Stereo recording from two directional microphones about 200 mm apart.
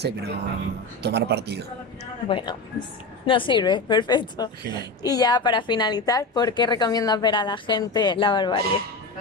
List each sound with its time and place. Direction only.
0.0 s speech: 55° right (ahead or behind)
2.2 s a woman's voice: 25° left (ahead or behind)